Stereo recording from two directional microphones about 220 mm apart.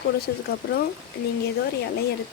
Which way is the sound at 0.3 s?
50° left (ahead or behind).